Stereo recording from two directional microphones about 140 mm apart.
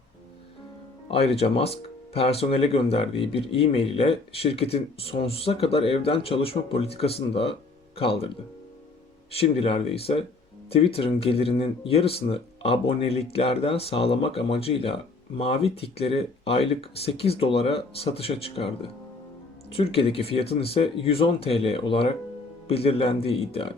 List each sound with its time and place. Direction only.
1.0 s speech: 45° left (ahead or behind)
9.3 s speech: 45° left (ahead or behind)
19.7 s speech: 40° left (ahead or behind)